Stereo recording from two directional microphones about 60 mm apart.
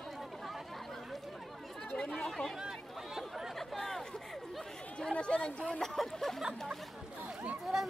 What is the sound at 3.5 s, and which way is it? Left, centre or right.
Chatter, centre.